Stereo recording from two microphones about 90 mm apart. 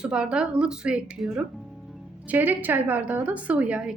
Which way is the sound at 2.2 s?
20° right (ahead or behind).